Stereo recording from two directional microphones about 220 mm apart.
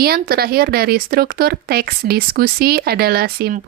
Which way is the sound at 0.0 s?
45° right (ahead or behind).